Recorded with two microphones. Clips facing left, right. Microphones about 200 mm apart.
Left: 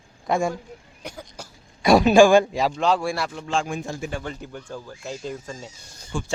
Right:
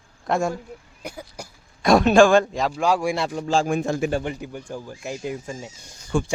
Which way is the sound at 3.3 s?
40° right (ahead or behind).